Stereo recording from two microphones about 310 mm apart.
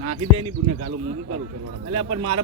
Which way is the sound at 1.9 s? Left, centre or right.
Right.